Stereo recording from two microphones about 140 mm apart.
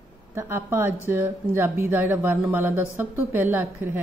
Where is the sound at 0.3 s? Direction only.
15° right (ahead or behind).